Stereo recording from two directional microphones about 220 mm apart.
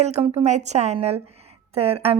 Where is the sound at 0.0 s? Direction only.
30° right (ahead or behind).